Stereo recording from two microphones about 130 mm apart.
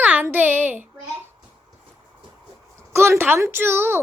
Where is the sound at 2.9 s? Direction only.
20° right (ahead or behind).